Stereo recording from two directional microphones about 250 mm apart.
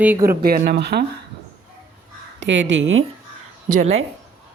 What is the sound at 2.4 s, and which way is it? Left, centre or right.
Speech, right.